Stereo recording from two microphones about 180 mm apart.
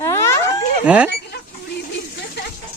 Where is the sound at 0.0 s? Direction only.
15° left (ahead or behind).